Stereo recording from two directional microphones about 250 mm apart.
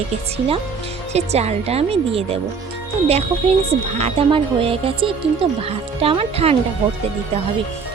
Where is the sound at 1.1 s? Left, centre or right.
Right.